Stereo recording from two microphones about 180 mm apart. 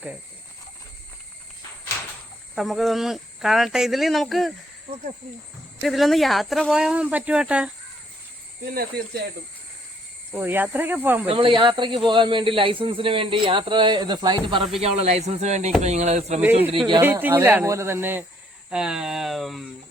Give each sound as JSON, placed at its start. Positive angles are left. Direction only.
{"t": 2.6, "sound": "speech", "side_deg": 0}
{"t": 5.8, "sound": "speech", "side_deg": 0}
{"t": 8.7, "sound": "speech", "side_deg": -55}
{"t": 10.3, "sound": "speech", "side_deg": -10}
{"t": 11.3, "sound": "speech", "side_deg": -30}
{"t": 17.0, "sound": "speech", "side_deg": -10}